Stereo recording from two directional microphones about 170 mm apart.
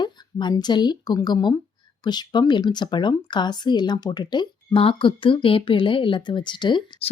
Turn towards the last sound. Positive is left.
turn(degrees=30)  # may be behind; listen again after turning